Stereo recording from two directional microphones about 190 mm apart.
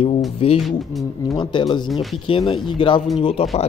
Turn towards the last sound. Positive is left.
turn(degrees=30)  # may be behind; listen again after turning